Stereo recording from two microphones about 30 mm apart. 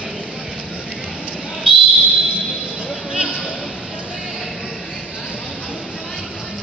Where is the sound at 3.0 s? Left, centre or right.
Right.